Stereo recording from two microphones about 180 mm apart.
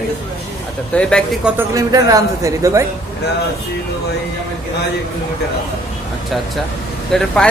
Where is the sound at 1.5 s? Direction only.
15° right (ahead or behind).